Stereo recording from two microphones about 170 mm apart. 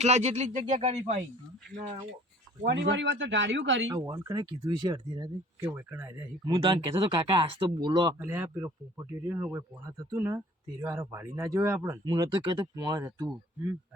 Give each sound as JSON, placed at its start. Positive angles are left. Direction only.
{"t": 0.0, "sound": "speech", "side_deg": -40}
{"t": 2.6, "sound": "speech", "side_deg": -90}
{"t": 3.9, "sound": "speech", "side_deg": -20}
{"t": 6.4, "sound": "speech", "side_deg": -30}
{"t": 8.2, "sound": "speech", "side_deg": -15}